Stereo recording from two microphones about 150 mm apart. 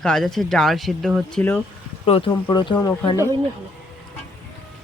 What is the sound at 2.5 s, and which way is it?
Speech, 30° left (ahead or behind).